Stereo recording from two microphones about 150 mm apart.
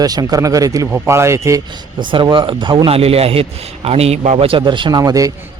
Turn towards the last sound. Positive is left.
turn(degrees=-25)  # may be behind; listen again after turning